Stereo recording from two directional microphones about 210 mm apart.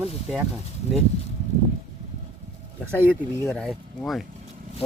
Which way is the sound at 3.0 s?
10° right (ahead or behind).